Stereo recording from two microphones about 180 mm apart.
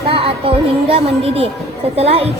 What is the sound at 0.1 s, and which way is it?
A woman's voice, 30° right (ahead or behind).